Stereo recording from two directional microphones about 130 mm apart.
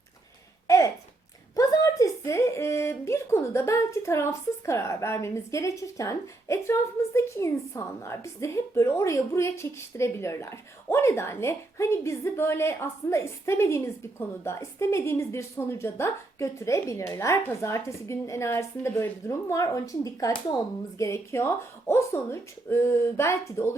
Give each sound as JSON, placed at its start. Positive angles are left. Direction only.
{"t": 1.5, "sound": "speech", "side_deg": 25}